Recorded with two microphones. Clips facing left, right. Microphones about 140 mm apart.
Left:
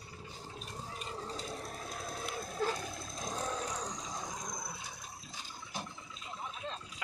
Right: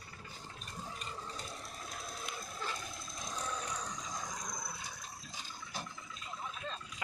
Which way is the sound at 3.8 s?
40° left (ahead or behind).